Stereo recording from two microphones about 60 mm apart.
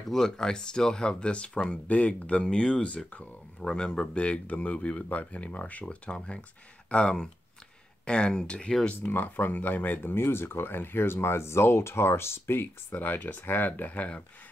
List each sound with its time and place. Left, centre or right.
0.1 s speech: centre
9.0 s speech: left